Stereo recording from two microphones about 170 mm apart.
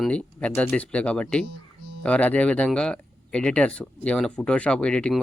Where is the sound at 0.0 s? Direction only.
5° left (ahead or behind).